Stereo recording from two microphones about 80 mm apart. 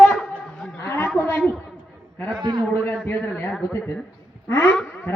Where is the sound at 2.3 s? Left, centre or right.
Right.